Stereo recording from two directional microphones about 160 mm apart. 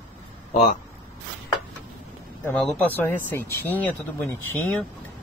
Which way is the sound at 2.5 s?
Centre (ahead or behind).